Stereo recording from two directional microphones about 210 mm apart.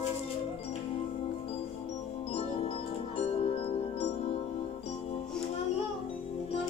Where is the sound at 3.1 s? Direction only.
30° left (ahead or behind).